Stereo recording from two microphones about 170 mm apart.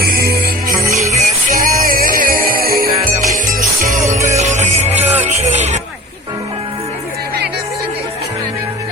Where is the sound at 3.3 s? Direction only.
50° right (ahead or behind).